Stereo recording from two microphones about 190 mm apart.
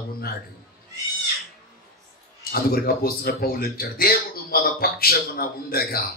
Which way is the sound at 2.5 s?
50° left (ahead or behind).